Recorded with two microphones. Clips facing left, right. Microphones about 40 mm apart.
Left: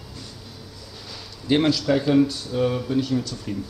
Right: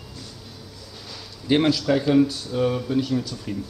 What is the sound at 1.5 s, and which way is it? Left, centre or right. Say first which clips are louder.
A man's voice: even; centre.